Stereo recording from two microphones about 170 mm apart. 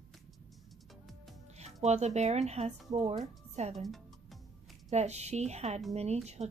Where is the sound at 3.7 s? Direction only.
Centre (ahead or behind).